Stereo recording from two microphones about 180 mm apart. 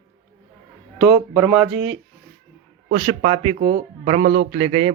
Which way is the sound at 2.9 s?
35° right (ahead or behind).